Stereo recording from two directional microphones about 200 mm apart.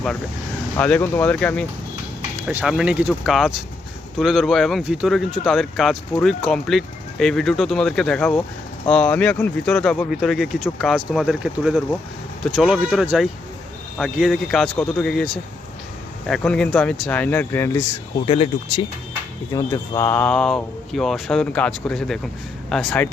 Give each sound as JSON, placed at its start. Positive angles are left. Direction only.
{"t": 0.8, "sound": "speech", "side_deg": 10}
{"t": 2.5, "sound": "speech", "side_deg": -5}
{"t": 18.3, "sound": "speech", "side_deg": 25}
{"t": 19.5, "sound": "speech", "side_deg": 15}